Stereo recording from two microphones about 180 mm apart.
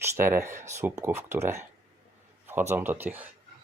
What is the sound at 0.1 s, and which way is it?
Speech, 15° right (ahead or behind).